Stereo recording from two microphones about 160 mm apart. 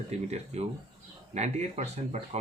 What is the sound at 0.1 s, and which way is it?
Speech, 45° right (ahead or behind).